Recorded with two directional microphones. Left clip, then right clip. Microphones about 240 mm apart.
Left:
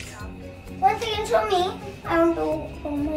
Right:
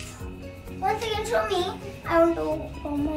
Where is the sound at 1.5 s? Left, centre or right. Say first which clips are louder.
Left 4 dB; centre.